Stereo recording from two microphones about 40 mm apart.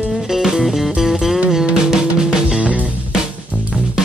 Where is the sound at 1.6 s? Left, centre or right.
Centre.